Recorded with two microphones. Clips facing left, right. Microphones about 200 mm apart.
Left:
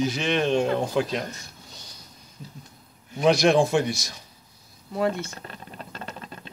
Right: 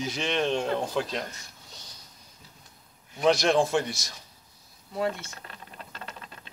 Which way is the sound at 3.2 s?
15° left (ahead or behind).